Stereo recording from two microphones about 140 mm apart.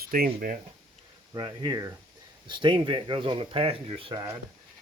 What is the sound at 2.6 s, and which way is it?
Speech, 35° right (ahead or behind).